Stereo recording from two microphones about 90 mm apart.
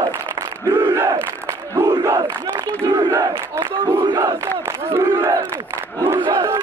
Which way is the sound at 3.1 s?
30° right (ahead or behind).